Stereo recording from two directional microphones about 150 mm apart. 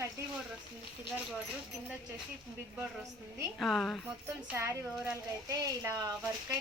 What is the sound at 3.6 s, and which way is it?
Speech, centre (ahead or behind).